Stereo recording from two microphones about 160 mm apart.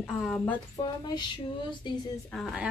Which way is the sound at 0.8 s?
25° left (ahead or behind).